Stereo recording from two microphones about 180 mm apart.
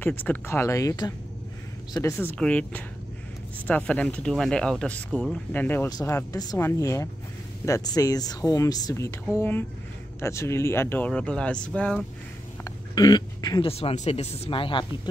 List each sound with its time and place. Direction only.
0.0 s speech: 10° left (ahead or behind)
12.6 s speech: 20° left (ahead or behind)